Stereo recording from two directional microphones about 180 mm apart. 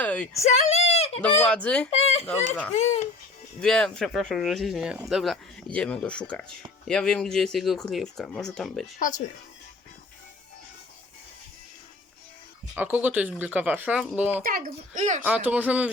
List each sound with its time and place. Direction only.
0.0 s a sound: 10° left (ahead or behind)
0.4 s a sound: 40° left (ahead or behind)
1.4 s speech: 5° left (ahead or behind)
1.9 s speech: 35° left (ahead or behind)
3.6 s speech: 5° left (ahead or behind)
9.0 s speech: 45° left (ahead or behind)
12.7 s speech: 10° right (ahead or behind)
14.4 s a woman's voice: 50° right (ahead or behind)
15.2 s speech: 10° right (ahead or behind)